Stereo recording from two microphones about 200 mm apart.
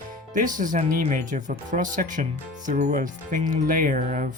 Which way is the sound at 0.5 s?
40° right (ahead or behind).